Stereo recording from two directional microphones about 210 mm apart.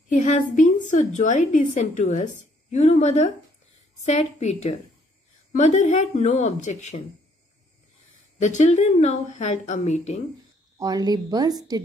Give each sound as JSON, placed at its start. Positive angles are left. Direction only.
{"t": 0.1, "sound": "a woman's voice", "side_deg": 35}
{"t": 8.4, "sound": "a woman's voice", "side_deg": 35}
{"t": 10.8, "sound": "a woman's voice", "side_deg": -20}